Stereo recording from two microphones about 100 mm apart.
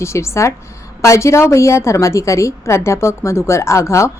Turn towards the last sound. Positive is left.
turn(degrees=30)  # may be behind; listen again after turning